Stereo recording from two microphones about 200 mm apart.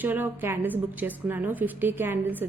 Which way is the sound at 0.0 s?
10° right (ahead or behind).